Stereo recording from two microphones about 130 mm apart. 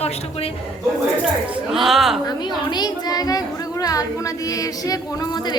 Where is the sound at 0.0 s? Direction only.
50° left (ahead or behind).